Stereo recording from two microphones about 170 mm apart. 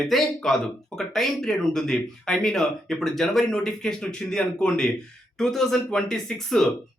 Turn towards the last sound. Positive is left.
turn(degrees=5)  # may be behind; listen again after turning